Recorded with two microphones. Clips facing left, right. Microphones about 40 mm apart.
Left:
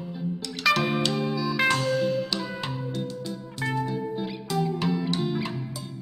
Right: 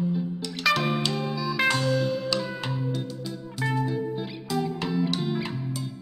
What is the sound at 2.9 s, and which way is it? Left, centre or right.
Music, centre.